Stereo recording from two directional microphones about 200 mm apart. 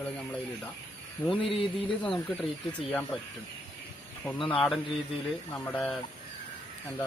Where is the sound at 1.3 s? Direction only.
25° left (ahead or behind).